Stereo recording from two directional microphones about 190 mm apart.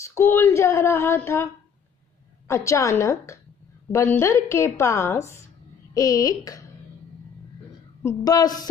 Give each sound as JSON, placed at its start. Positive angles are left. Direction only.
{"t": 0.0, "sound": "a woman's voice", "side_deg": 15}
{"t": 8.0, "sound": "a woman's voice", "side_deg": 15}